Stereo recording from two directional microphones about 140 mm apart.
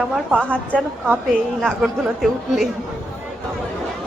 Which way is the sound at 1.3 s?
Centre (ahead or behind).